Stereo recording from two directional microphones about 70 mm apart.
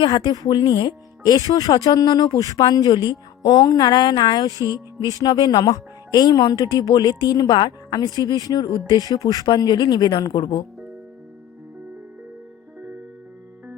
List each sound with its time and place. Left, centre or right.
0.0 s speech: left
8.9 s speech: left